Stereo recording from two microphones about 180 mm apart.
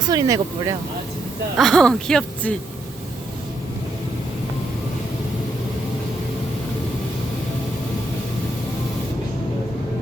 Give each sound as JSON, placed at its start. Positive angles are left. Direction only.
{"t": 0.1, "sound": "speech", "side_deg": -20}
{"t": 1.5, "sound": "speech", "side_deg": 0}